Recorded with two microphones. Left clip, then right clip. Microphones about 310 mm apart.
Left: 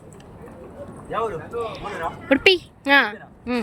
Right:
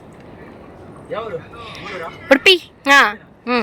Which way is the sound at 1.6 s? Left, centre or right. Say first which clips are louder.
Left 7 dB; left.